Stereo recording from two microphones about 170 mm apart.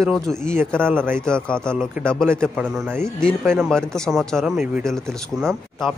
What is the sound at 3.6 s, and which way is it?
Speech, centre (ahead or behind).